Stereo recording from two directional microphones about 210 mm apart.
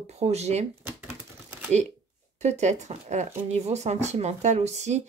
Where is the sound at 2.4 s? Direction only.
35° right (ahead or behind).